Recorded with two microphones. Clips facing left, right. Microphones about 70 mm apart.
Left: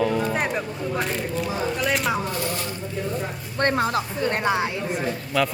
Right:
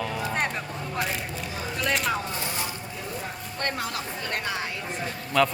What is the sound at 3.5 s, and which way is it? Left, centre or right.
Speech, left.